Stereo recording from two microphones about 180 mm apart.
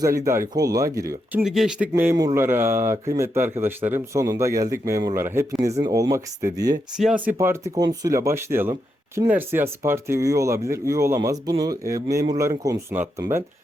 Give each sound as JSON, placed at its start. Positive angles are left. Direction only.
{"t": 0.0, "sound": "speech", "side_deg": -15}
{"t": 1.9, "sound": "speech", "side_deg": -15}
{"t": 6.9, "sound": "speech", "side_deg": -5}
{"t": 7.3, "sound": "speech", "side_deg": -15}